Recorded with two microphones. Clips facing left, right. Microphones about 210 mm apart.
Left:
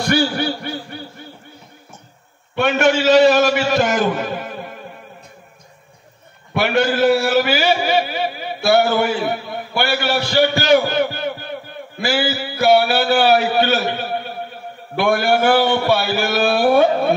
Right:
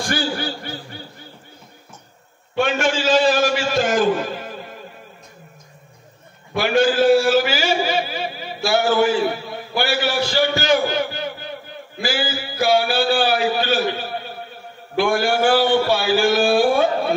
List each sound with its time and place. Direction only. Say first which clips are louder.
0.1 s a man's voice: left 7 dB; 65° left (ahead or behind)
2.5 s a man's voice: left 4 dB; 55° left (ahead or behind)
4.0 s a sound: right 1 dB; 55° left (ahead or behind)
6.5 s a man's voice: even; 60° left (ahead or behind)